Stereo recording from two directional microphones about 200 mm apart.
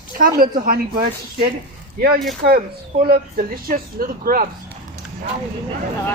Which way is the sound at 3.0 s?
45° right (ahead or behind).